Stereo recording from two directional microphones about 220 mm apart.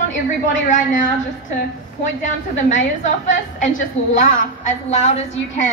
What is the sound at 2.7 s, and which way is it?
A woman's voice, 35° left (ahead or behind).